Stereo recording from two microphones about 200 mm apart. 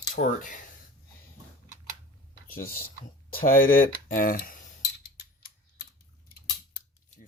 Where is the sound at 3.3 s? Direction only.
45° left (ahead or behind).